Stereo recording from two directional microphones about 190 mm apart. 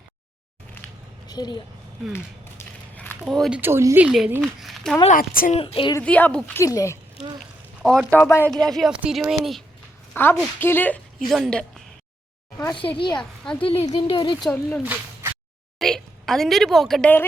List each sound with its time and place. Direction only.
1.3 s speech: 20° left (ahead or behind)
2.1 s a sound: 10° left (ahead or behind)
3.6 s speech: 15° right (ahead or behind)
5.0 s a woman's voice: 45° left (ahead or behind)
5.5 s speech: 30° left (ahead or behind)
6.0 s speech: 10° left (ahead or behind)
7.8 s speech: 5° right (ahead or behind)
8.1 s speech: 10° left (ahead or behind)
10.2 s speech: 10° left (ahead or behind)
12.5 s speech: 25° left (ahead or behind)
13.1 s a woman's voice: 5° left (ahead or behind)
13.6 s speech: 30° left (ahead or behind)
14.4 s speech: 5° left (ahead or behind)
15.8 s a woman's voice: centre (ahead or behind)